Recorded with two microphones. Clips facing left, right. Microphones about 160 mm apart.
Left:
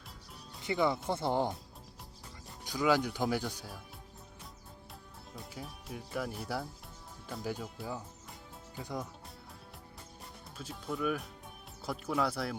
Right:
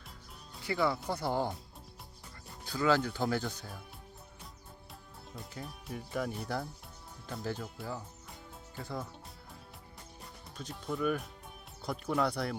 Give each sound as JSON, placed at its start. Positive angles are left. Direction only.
{"t": 0.6, "sound": "speech", "side_deg": 20}
{"t": 2.6, "sound": "speech", "side_deg": 15}
{"t": 5.3, "sound": "speech", "side_deg": 0}
{"t": 8.8, "sound": "speech", "side_deg": 15}
{"t": 10.6, "sound": "speech", "side_deg": 0}